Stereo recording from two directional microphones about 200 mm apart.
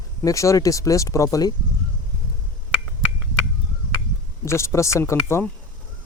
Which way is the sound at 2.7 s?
10° right (ahead or behind).